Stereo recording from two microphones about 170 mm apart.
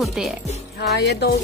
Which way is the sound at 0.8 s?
80° left.